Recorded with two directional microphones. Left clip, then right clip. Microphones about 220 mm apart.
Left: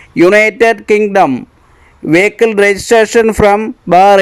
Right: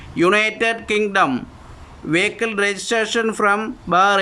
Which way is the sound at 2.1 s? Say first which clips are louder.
Left 10 dB; 25° left (ahead or behind).